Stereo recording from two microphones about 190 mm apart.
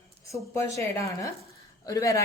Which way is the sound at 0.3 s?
15° left (ahead or behind).